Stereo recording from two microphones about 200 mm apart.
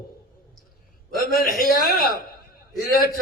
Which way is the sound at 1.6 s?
45° left (ahead or behind).